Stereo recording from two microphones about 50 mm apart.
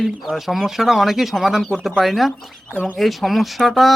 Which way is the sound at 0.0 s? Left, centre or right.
Centre.